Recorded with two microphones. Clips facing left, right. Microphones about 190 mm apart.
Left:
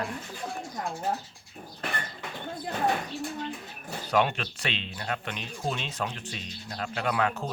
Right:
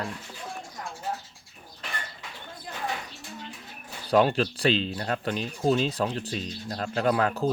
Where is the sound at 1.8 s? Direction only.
55° left (ahead or behind).